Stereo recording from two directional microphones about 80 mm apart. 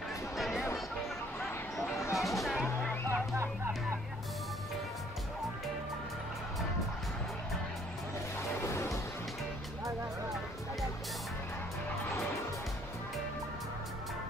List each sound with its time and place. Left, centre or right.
0.4 s music: centre
2.1 s music: centre
3.1 s music: right
8.4 s music: left